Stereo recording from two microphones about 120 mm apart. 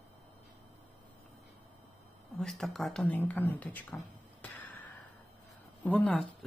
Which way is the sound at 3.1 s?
15° left (ahead or behind).